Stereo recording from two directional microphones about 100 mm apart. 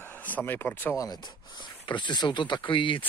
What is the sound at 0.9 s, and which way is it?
Speech, 40° left (ahead or behind).